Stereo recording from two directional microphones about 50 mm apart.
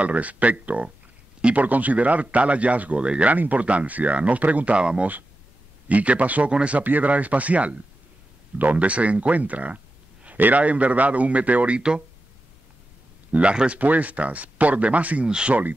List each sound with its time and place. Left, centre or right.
0.0 s speech: right
6.8 s speech: right
13.3 s speech: right
15.2 s speech: centre